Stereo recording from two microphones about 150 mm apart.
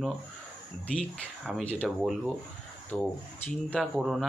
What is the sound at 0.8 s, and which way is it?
Speech, 10° left (ahead or behind).